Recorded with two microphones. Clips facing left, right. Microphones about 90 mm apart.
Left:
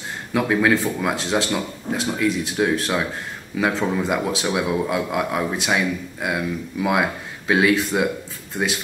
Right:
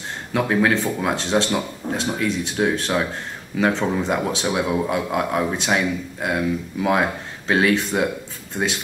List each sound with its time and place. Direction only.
0.3 s speech: centre (ahead or behind)